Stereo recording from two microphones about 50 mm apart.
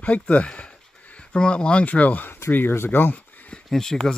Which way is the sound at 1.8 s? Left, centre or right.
Left.